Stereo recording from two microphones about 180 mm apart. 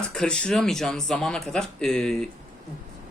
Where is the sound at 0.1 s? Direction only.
5° left (ahead or behind).